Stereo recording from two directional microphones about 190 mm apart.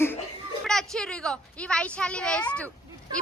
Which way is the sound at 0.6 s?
Centre (ahead or behind).